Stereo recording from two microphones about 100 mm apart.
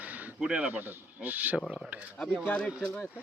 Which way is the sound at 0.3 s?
10° right (ahead or behind).